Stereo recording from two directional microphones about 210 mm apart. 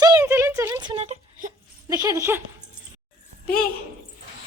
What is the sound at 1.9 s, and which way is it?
Speech, 15° right (ahead or behind).